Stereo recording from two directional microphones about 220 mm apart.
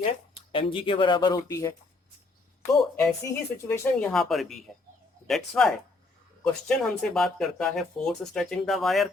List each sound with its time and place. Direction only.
0.5 s speech: 25° left (ahead or behind)
2.9 s speech: centre (ahead or behind)